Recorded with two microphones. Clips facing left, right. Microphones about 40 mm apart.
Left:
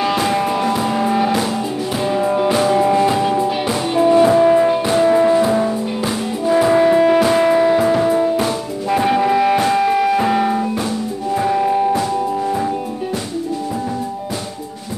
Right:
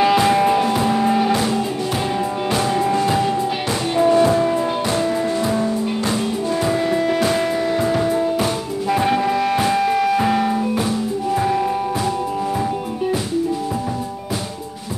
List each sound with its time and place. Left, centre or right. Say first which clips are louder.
0.0 s music: right 3 dB; centre
5.0 s music: left 8 dB; left
5.3 s music: left 5 dB; centre
7.2 s music: left 6 dB; centre